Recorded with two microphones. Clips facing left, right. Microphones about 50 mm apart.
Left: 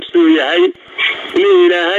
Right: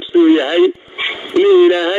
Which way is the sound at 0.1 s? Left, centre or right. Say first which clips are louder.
Even; left.